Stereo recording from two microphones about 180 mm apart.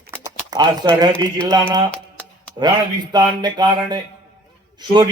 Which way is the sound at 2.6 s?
25° right (ahead or behind).